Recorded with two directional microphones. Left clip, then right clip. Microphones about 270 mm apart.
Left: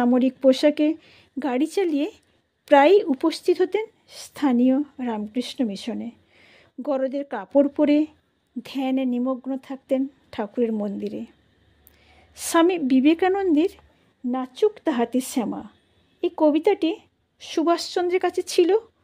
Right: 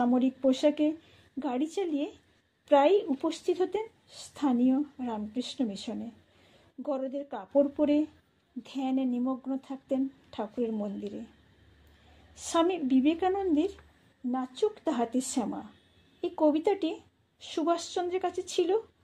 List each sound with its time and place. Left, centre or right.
0.0 s a woman's voice: left
12.4 s a woman's voice: left